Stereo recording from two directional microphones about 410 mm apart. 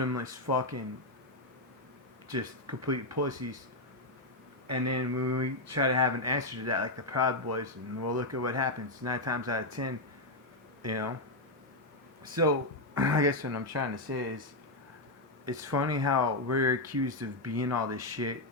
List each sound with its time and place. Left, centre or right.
0.0 s speech: right
2.3 s speech: right
4.7 s speech: right
12.2 s speech: right
15.4 s speech: right